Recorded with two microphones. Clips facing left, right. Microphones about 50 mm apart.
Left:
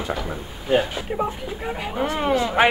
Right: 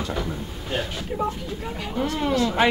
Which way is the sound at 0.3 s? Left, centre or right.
Centre.